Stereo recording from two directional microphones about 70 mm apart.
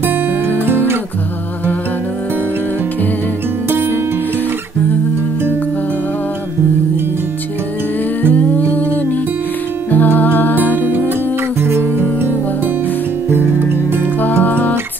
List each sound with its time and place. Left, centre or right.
0.0 s music: right
8.2 s humming: left
9.8 s music: left
11.6 s music: right
14.4 s music: left